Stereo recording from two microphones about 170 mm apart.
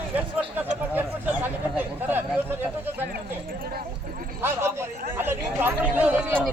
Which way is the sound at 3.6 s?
60° right (ahead or behind).